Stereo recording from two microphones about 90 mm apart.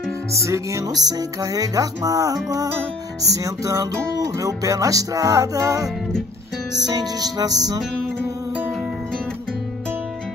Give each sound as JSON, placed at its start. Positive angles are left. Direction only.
{"t": 0.5, "sound": "music", "side_deg": -35}